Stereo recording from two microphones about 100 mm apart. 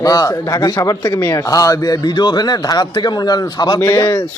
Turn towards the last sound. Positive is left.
turn(degrees=30)  # may be behind; listen again after turning